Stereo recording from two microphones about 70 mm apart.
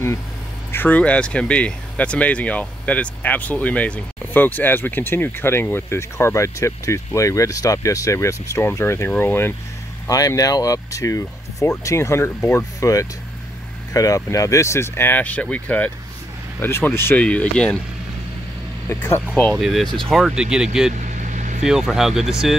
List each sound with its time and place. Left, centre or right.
0.7 s speech: left
10.0 s speech: left
17.2 s speech: centre
18.9 s speech: left
19.5 s speech: centre